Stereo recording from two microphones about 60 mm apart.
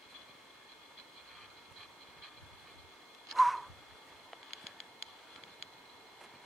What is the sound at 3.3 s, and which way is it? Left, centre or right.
Owl, centre.